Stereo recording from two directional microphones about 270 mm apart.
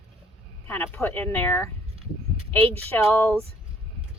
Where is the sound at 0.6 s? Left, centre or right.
Centre.